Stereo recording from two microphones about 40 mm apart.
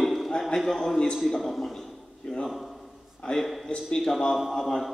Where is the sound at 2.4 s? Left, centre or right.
Centre.